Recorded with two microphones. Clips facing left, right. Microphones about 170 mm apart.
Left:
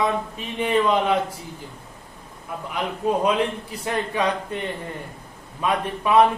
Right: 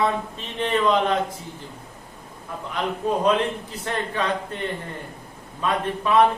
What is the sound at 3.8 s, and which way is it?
Speech, 10° left (ahead or behind).